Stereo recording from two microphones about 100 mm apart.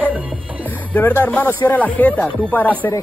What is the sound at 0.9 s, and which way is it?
Speech, 15° left (ahead or behind).